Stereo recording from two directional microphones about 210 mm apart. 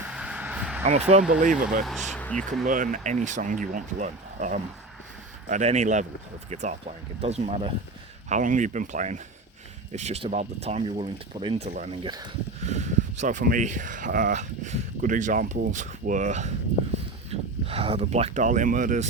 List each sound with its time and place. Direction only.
0.1 s vehicle: 5° right (ahead or behind)
0.9 s speech: 30° right (ahead or behind)
1.8 s speech: centre (ahead or behind)
2.6 s speech: 40° right (ahead or behind)
12.0 s speech: 20° right (ahead or behind)
12.6 s speech: 35° right (ahead or behind)
17.7 s speech: 30° right (ahead or behind)